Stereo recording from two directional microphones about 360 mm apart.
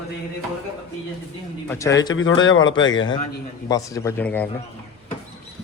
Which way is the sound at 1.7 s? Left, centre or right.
Centre.